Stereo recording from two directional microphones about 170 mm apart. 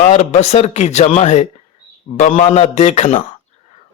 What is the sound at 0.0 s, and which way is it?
A man's voice, 45° left (ahead or behind).